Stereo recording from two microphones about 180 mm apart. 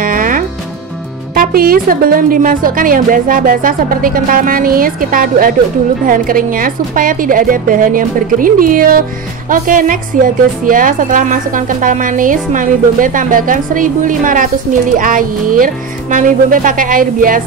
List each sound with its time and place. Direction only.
0.0 s music: 50° right (ahead or behind)
1.3 s a woman's voice: 55° right (ahead or behind)